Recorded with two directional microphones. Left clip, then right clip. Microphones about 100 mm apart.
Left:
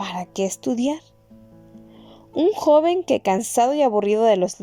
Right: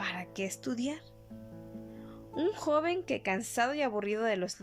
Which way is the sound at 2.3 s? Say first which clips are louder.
Left 14 dB; 50° left (ahead or behind).